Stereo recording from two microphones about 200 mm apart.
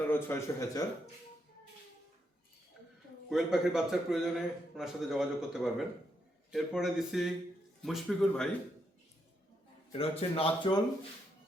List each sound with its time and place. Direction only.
0.1 s a man's voice: 10° left (ahead or behind)
3.2 s a man's voice: centre (ahead or behind)
9.9 s speech: 30° left (ahead or behind)